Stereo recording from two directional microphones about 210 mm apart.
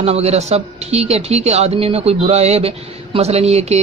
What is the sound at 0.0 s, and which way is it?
A man's voice, 30° right (ahead or behind).